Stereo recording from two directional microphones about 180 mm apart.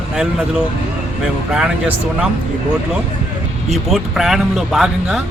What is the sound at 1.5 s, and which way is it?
Speech, 5° right (ahead or behind).